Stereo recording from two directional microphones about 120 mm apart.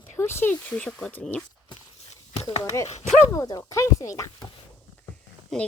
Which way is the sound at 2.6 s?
25° left (ahead or behind).